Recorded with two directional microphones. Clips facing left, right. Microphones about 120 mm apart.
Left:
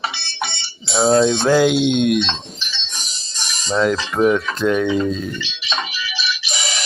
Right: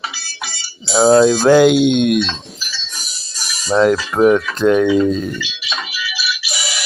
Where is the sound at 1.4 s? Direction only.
60° right (ahead or behind).